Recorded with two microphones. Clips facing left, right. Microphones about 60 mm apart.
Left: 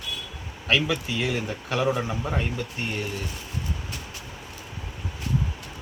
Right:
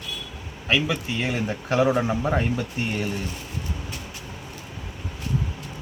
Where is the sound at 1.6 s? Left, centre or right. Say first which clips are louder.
Right 5 dB; right.